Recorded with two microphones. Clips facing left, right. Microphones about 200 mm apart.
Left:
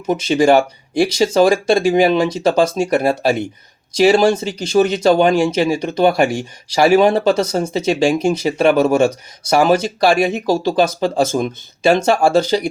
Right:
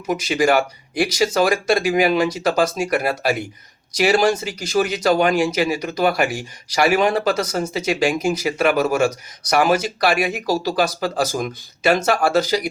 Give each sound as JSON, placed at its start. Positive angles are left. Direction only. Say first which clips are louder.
{"t": 0.0, "sound": "speech", "louder": "left 5 dB", "side_deg": 30}